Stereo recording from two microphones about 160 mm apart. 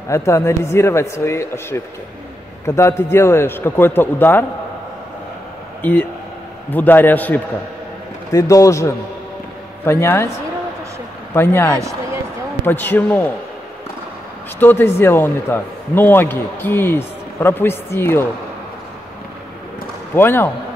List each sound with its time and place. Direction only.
0.1 s a man's voice: 20° left (ahead or behind)
5.8 s a man's voice: 10° left (ahead or behind)
8.3 s a man's voice: 20° left (ahead or behind)
11.3 s a man's voice: 15° left (ahead or behind)
14.6 s a man's voice: 15° left (ahead or behind)
20.2 s a man's voice: 15° left (ahead or behind)